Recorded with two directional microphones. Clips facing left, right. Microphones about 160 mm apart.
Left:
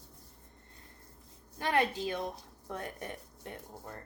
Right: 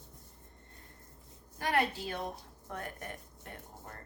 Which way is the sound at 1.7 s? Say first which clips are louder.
Left 2 dB; 20° left (ahead or behind).